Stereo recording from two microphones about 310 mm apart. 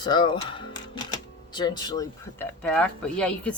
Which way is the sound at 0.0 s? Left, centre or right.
Centre.